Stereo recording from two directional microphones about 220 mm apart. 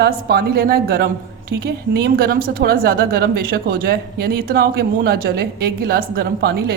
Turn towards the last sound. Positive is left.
turn(degrees=-45)  # may be behind; listen again after turning